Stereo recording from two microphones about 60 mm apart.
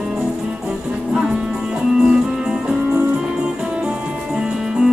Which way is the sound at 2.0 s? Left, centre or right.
Centre.